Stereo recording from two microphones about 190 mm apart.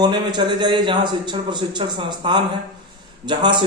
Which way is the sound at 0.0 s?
20° right (ahead or behind).